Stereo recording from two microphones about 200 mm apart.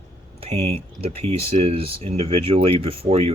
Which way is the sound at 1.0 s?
30° right (ahead or behind).